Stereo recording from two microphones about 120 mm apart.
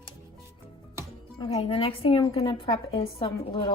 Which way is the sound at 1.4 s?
50° left (ahead or behind).